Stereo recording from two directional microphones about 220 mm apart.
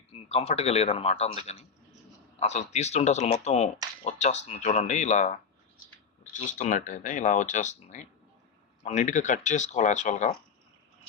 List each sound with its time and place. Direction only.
0.1 s speech: 30° left (ahead or behind)